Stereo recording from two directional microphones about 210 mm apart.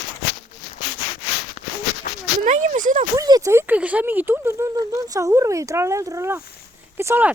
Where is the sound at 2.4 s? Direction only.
35° right (ahead or behind).